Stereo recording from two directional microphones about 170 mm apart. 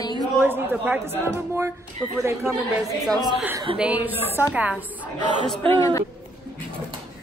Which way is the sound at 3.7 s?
10° right (ahead or behind).